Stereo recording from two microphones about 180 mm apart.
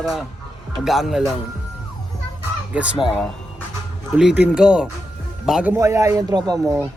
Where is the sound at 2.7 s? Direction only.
5° right (ahead or behind).